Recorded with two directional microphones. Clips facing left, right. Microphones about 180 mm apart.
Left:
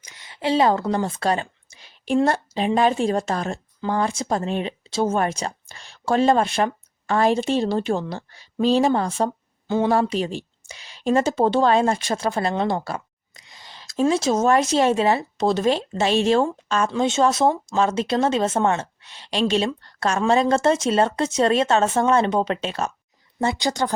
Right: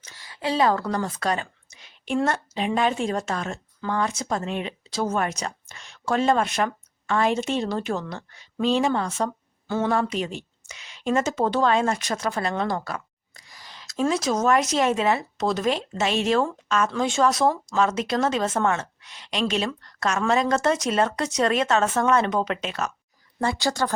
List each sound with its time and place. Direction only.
0.0 s a woman's voice: 20° left (ahead or behind)
9.6 s speech: 20° left (ahead or behind)
9.9 s a woman's voice: 35° left (ahead or behind)
23.4 s speech: 20° left (ahead or behind)